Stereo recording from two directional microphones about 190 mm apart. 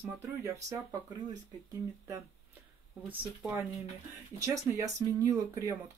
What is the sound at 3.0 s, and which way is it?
Speech, 10° right (ahead or behind).